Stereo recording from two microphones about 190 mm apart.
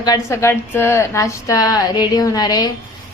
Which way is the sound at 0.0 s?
15° left (ahead or behind).